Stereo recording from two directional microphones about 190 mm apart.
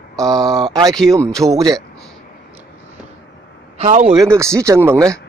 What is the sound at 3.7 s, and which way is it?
Speech, 35° right (ahead or behind).